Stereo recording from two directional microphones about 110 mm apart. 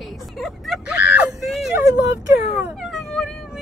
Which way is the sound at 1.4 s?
Centre (ahead or behind).